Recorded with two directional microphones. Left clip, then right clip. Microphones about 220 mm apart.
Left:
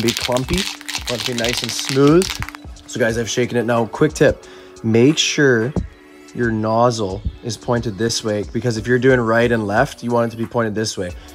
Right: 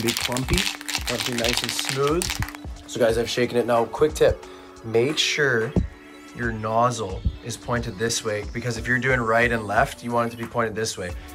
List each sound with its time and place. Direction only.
0.0 s speech: centre (ahead or behind)
2.9 s speech: 40° left (ahead or behind)
6.6 s speech: 25° left (ahead or behind)